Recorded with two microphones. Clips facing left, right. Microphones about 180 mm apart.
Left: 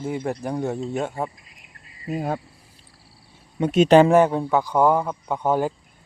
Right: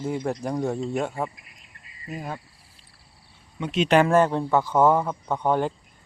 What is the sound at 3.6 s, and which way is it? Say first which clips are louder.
Speech: left 7 dB; 45° left (ahead or behind).